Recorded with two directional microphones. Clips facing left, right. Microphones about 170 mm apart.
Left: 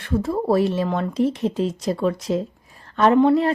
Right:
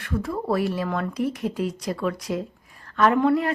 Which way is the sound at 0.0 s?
30° left (ahead or behind).